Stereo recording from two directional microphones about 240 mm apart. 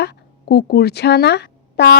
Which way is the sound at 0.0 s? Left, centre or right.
Left.